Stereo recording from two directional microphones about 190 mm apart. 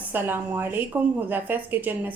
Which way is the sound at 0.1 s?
10° right (ahead or behind).